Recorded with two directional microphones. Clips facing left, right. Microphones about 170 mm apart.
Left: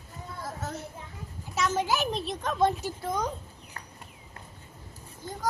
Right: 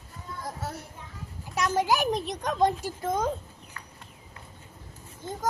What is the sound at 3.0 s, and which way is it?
Speech, 50° right (ahead or behind).